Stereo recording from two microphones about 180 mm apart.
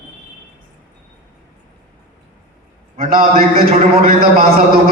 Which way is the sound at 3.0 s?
55° right (ahead or behind).